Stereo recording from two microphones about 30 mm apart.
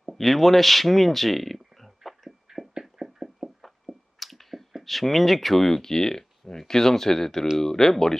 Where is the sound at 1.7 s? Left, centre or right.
Centre.